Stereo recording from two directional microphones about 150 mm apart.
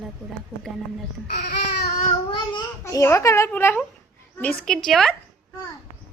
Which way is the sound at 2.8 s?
20° left (ahead or behind).